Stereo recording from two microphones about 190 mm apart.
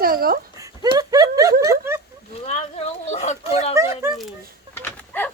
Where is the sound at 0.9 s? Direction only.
20° right (ahead or behind).